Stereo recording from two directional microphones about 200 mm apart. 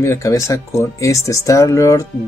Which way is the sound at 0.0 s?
15° left (ahead or behind).